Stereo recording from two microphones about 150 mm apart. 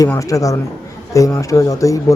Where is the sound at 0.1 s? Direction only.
20° left (ahead or behind).